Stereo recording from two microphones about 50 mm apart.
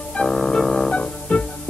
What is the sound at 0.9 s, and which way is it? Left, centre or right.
Music, left.